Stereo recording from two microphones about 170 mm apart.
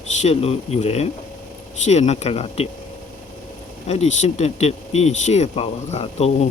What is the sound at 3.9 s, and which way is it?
Speech, 40° left (ahead or behind).